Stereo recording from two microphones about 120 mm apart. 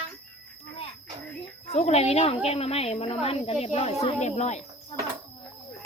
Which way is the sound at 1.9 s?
60° left (ahead or behind).